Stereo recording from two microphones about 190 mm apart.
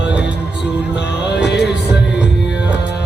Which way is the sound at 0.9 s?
65° left (ahead or behind).